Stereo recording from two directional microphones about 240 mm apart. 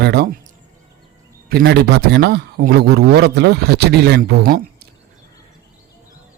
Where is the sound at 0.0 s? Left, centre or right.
Right.